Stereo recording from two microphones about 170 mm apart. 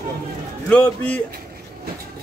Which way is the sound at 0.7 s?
10° left (ahead or behind).